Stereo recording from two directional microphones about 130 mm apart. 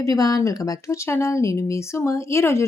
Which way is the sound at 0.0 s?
30° left (ahead or behind).